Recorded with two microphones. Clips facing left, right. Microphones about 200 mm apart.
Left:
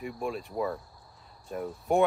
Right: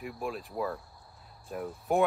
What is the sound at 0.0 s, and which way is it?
Speech, centre (ahead or behind).